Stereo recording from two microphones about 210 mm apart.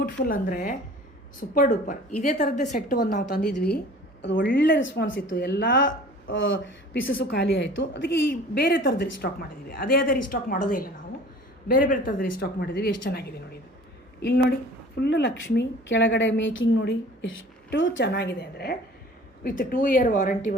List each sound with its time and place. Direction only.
0.3 s a woman's voice: 40° left (ahead or behind)
4.4 s a woman's voice: 55° left (ahead or behind); by 20.6 s 40° left (ahead or behind)